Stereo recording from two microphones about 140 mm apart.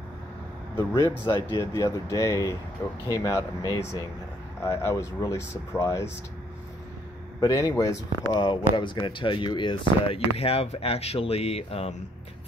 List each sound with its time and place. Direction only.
0.7 s speech: 20° left (ahead or behind)
7.3 s speech: 25° left (ahead or behind); by 11.9 s 45° left (ahead or behind)